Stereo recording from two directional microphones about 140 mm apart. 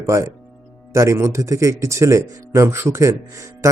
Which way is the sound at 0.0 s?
20° right (ahead or behind).